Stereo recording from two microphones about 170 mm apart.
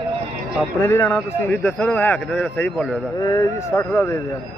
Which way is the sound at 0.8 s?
15° left (ahead or behind).